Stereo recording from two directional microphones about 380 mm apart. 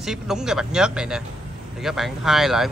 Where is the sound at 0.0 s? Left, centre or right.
Centre.